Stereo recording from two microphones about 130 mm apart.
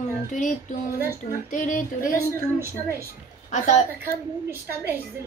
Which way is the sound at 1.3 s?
85° left.